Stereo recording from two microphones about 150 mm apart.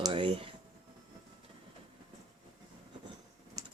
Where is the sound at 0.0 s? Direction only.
35° right (ahead or behind).